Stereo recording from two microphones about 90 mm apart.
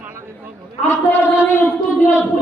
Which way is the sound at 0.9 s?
30° left (ahead or behind).